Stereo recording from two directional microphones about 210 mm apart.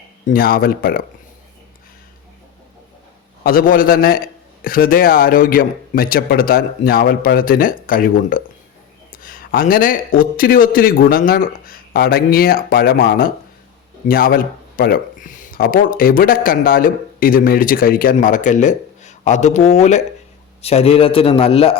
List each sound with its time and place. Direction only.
0.3 s speech: 45° left (ahead or behind)
3.4 s a man's voice: 40° left (ahead or behind); by 21.8 s 25° left (ahead or behind)